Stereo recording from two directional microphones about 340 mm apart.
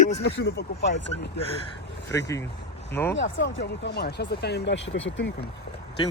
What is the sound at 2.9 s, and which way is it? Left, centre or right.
Speech, centre.